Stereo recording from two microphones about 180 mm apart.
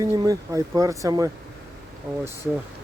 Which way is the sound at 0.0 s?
20° right (ahead or behind).